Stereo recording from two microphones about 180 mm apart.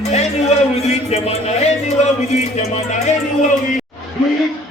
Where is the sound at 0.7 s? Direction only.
35° left (ahead or behind).